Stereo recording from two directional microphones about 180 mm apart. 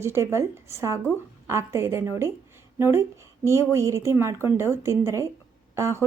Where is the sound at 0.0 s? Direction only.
15° right (ahead or behind).